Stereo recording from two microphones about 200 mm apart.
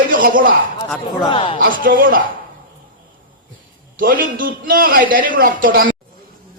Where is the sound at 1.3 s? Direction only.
25° left (ahead or behind).